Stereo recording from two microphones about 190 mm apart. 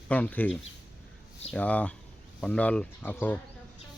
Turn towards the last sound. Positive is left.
turn(degrees=10)  # may be behind; listen again after turning